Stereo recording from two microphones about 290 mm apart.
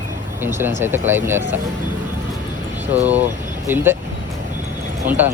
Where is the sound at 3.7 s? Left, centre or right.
Centre.